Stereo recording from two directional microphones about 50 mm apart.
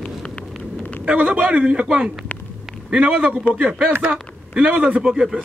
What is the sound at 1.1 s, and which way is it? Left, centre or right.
A man's voice, right.